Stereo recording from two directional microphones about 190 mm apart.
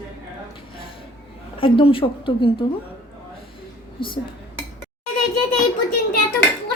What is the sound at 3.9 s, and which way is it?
Speech, 25° left (ahead or behind).